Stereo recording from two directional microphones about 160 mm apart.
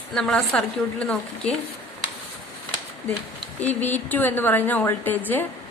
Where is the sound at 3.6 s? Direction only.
10° left (ahead or behind).